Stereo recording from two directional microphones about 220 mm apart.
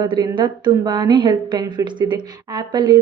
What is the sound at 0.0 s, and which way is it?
A woman's voice, 20° right (ahead or behind).